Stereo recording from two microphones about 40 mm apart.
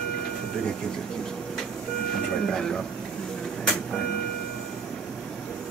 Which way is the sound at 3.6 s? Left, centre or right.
Left.